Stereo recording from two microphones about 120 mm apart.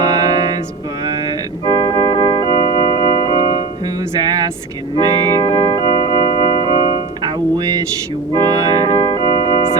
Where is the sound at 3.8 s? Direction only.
35° right (ahead or behind).